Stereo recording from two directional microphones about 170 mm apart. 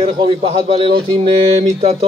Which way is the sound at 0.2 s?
35° right (ahead or behind).